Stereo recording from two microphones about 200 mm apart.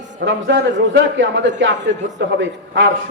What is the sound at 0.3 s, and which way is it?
A man's voice, 65° right (ahead or behind).